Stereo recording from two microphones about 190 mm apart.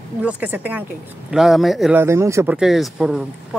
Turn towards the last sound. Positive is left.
turn(degrees=0)  # may be behind; listen again after turning